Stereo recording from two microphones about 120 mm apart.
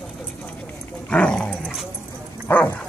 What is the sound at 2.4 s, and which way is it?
Bow-wow, 15° left (ahead or behind).